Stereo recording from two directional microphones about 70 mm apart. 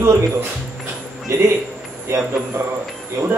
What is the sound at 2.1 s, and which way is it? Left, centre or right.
Speech, right.